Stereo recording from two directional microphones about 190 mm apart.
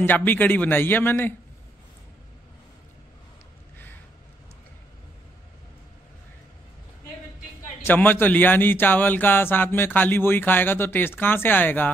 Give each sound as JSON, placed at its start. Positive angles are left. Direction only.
{"t": 0.0, "sound": "speech", "side_deg": 10}
{"t": 7.8, "sound": "speech", "side_deg": 10}